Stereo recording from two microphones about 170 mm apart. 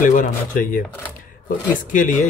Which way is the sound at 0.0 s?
50° left (ahead or behind).